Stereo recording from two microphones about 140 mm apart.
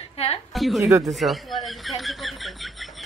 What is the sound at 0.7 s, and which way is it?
Speech, 20° right (ahead or behind).